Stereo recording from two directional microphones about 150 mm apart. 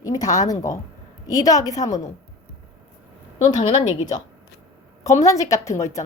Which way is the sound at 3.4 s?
50° left (ahead or behind).